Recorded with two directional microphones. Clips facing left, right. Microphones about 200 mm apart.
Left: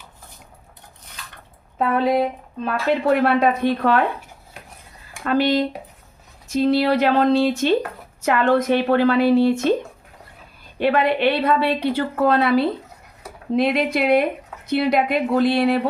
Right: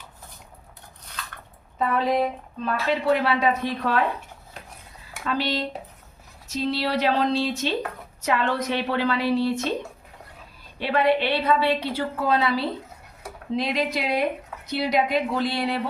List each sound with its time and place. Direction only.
2.6 s a woman's voice: 55° left (ahead or behind)
5.2 s speech: 55° left (ahead or behind)
10.8 s a woman's voice: 55° left (ahead or behind)